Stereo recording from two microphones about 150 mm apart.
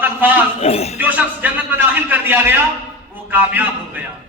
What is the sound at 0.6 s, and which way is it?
Speech, 45° left (ahead or behind).